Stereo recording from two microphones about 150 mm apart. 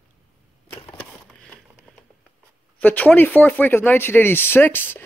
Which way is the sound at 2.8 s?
10° left (ahead or behind).